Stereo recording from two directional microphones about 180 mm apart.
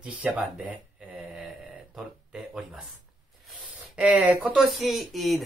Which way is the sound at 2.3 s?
5° right (ahead or behind).